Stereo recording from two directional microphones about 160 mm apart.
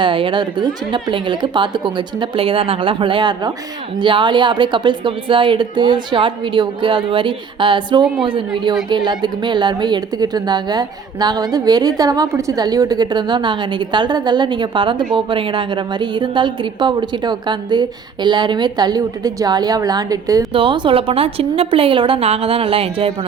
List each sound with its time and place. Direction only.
0.0 s a woman's voice: 30° right (ahead or behind)